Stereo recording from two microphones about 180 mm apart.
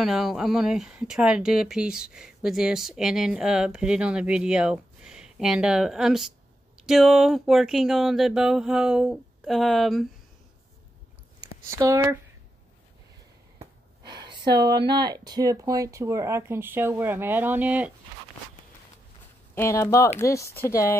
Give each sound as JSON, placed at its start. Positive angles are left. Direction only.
{"t": 0.0, "sound": "speech", "side_deg": 0}
{"t": 11.8, "sound": "speech", "side_deg": -20}
{"t": 14.0, "sound": "speech", "side_deg": -25}
{"t": 19.5, "sound": "speech", "side_deg": 15}